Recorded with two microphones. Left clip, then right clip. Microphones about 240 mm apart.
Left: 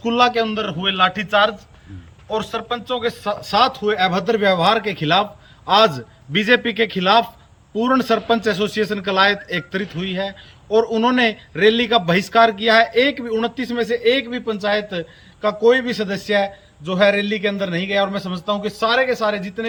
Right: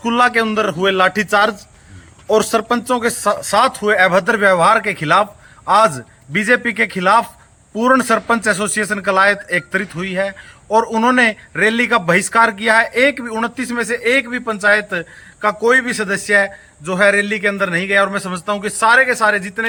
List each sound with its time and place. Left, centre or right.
0.0 s a man's voice: centre